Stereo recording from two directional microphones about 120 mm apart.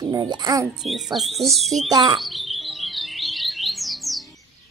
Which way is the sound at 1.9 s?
40° right (ahead or behind).